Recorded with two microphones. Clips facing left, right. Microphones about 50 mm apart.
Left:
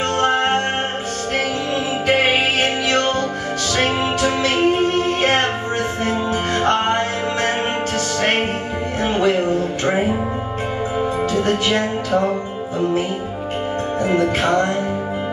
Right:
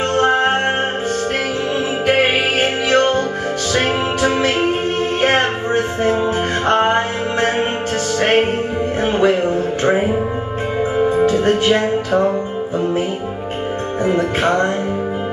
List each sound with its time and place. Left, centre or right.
0.2 s music: centre
2.0 s music: centre
6.6 s music: centre
8.2 s music: centre
11.2 s music: right
14.0 s music: centre
14.4 s music: right